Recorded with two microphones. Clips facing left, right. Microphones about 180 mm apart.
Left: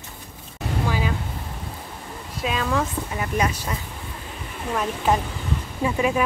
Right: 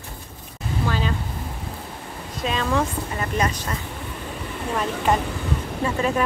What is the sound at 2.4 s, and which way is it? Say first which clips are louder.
Speech: right 1 dB; 5° left (ahead or behind).